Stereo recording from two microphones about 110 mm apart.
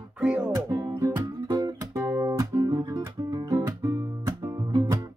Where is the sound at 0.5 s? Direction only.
35° right (ahead or behind).